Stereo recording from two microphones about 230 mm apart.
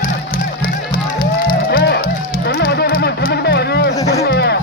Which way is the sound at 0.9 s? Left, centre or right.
Left.